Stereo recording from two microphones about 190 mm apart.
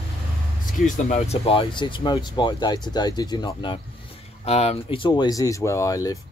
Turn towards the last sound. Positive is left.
turn(degrees=20)  # may be behind; listen again after turning